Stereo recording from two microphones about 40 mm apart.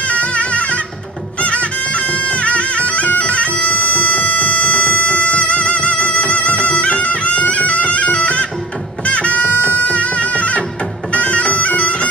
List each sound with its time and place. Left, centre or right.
0.0 s music: left
3.2 s bagpipes: left
3.6 s music: left
9.8 s bagpipes: left